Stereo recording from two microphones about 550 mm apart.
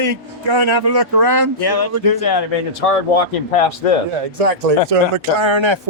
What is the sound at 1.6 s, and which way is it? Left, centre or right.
Speech, left.